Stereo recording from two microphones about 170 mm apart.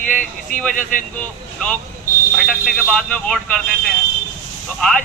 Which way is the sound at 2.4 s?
Centre (ahead or behind).